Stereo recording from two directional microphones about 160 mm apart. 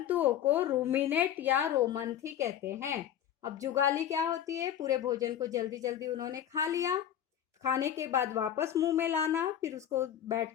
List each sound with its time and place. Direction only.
0.0 s a woman's voice: 10° right (ahead or behind)